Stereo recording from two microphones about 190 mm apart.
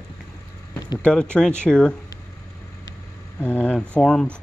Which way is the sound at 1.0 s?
5° left (ahead or behind).